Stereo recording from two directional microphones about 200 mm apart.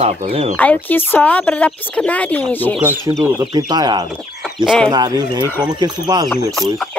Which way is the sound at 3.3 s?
15° right (ahead or behind).